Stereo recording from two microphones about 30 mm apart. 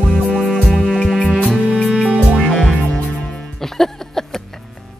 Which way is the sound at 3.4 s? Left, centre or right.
Centre.